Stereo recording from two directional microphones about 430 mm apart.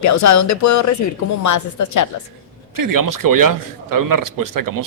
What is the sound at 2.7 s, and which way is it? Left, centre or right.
Speech, right.